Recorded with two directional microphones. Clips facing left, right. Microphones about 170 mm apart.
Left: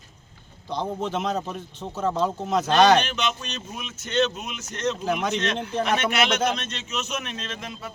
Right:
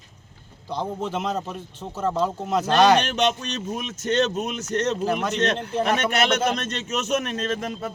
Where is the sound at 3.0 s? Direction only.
40° right (ahead or behind).